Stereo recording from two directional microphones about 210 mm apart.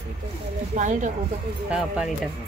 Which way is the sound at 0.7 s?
35° right (ahead or behind).